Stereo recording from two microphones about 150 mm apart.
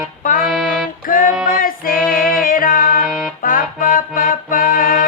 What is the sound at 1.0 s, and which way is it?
Music, 65° left (ahead or behind).